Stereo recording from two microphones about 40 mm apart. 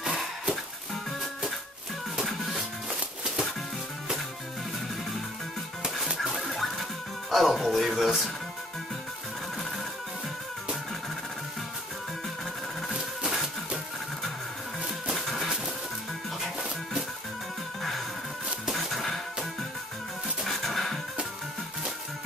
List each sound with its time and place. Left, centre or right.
0.0 s music: centre
2.2 s music: centre
2.5 s music: centre
6.1 s music: centre
13.2 s music: centre
14.8 s music: centre
18.7 s music: centre
20.4 s a sound: centre